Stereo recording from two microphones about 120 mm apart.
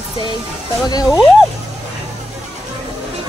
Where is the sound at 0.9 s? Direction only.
35° left (ahead or behind).